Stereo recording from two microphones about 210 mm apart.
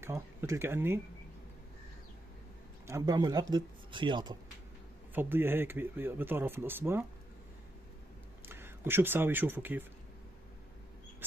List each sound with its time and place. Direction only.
0.0 s speech: 10° right (ahead or behind)
2.9 s speech: 20° right (ahead or behind)
5.1 s speech: 10° right (ahead or behind)
8.5 s speech: 10° right (ahead or behind)